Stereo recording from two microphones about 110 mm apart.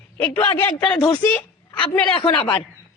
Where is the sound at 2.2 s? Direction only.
50° left (ahead or behind).